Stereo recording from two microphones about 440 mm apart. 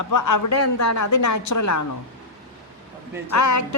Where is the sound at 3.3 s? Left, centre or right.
Left.